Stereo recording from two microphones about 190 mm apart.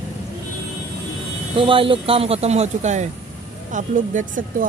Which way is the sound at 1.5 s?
30° right (ahead or behind).